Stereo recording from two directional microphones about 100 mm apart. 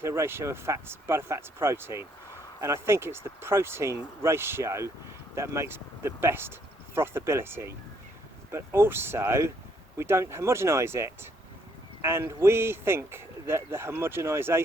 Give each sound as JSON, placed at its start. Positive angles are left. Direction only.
{"t": 0.0, "sound": "speech", "side_deg": -25}